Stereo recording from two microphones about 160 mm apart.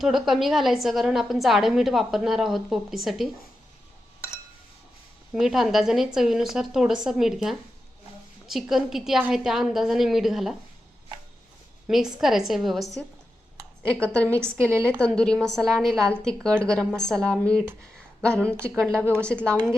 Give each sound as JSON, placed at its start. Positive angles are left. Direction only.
{"t": 0.0, "sound": "a woman's voice", "side_deg": 0}
{"t": 5.3, "sound": "a woman's voice", "side_deg": -5}
{"t": 11.9, "sound": "a woman's voice", "side_deg": 0}
{"t": 14.7, "sound": "a woman's voice", "side_deg": -15}
{"t": 15.0, "sound": "a woman's voice", "side_deg": 5}
{"t": 18.9, "sound": "a woman's voice", "side_deg": -15}
{"t": 19.2, "sound": "a woman's voice", "side_deg": 5}